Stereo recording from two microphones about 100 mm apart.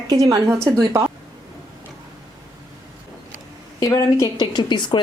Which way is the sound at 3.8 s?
35° left (ahead or behind).